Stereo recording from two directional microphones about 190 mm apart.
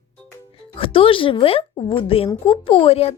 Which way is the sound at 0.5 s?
30° left (ahead or behind).